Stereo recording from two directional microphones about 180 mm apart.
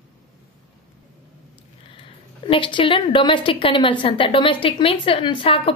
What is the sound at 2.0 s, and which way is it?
A woman's voice, 30° left (ahead or behind).